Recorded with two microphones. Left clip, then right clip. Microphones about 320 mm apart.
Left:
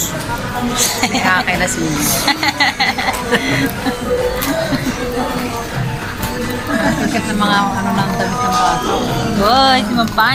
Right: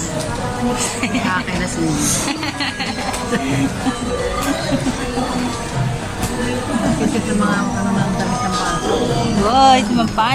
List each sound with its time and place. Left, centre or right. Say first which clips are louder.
2.4 s speech: left 8 dB; centre
9.5 s speech: even; centre